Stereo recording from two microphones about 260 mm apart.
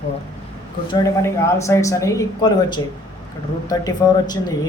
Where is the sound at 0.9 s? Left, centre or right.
Centre.